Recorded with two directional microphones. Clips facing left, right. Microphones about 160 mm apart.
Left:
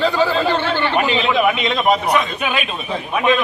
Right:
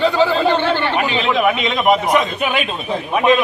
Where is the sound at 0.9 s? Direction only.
Centre (ahead or behind).